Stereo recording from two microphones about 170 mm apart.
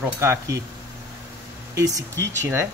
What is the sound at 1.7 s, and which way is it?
Speech, 20° right (ahead or behind).